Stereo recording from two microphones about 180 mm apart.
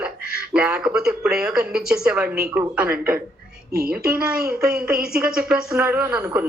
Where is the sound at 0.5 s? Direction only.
5° right (ahead or behind).